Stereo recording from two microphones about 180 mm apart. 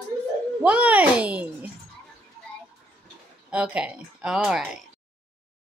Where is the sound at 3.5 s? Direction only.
5° right (ahead or behind).